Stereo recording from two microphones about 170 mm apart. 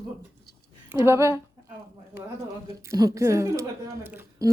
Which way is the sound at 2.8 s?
20° right (ahead or behind).